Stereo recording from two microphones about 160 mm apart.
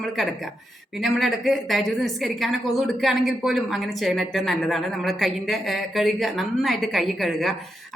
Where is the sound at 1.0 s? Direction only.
Centre (ahead or behind).